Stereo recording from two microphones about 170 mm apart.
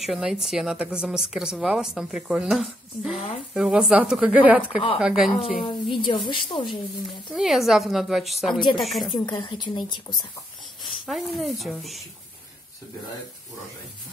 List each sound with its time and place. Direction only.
0.0 s a woman's voice: centre (ahead or behind)
5.7 s a woman's voice: 30° left (ahead or behind)
7.3 s a woman's voice: centre (ahead or behind)
9.2 s a woman's voice: 25° left (ahead or behind)
10.8 s speech: centre (ahead or behind)